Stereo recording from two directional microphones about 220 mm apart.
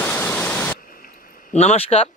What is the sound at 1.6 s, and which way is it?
Speech, 30° left (ahead or behind).